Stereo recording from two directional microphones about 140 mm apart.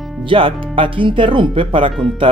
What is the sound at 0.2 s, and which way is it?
Speech, 40° right (ahead or behind).